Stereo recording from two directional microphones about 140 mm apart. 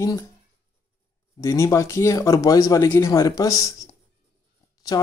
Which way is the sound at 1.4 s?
20° left (ahead or behind).